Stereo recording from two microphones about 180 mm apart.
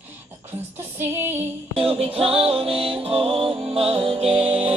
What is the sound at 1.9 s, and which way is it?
Music, 30° right (ahead or behind).